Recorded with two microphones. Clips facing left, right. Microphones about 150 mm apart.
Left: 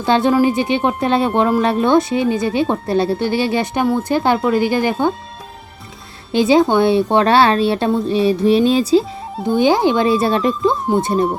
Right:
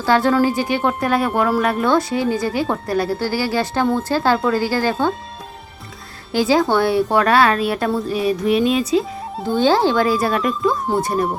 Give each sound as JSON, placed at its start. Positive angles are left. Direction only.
{"t": 0.0, "sound": "speech", "side_deg": 20}
{"t": 6.3, "sound": "speech", "side_deg": 20}
{"t": 9.5, "sound": "speech", "side_deg": 15}